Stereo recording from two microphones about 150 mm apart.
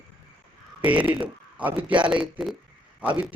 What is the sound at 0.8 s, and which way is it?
A man's voice, 10° right (ahead or behind).